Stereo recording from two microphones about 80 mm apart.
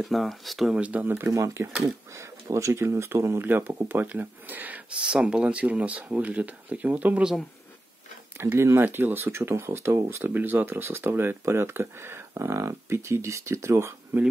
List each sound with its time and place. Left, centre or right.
0.0 s speech: centre
0.7 s speech: centre
1.3 s speech: right
8.4 s speech: right